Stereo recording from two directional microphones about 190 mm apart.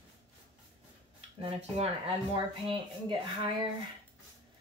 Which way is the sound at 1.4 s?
30° right (ahead or behind).